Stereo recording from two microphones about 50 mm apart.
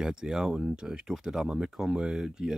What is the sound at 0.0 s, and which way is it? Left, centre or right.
Speech, centre.